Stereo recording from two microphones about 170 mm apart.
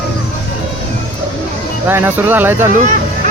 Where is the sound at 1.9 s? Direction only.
10° right (ahead or behind).